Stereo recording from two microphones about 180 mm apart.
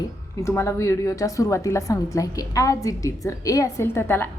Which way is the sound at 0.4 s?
15° left (ahead or behind).